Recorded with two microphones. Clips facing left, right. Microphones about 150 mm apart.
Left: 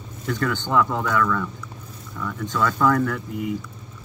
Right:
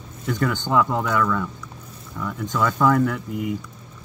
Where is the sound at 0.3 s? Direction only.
15° right (ahead or behind).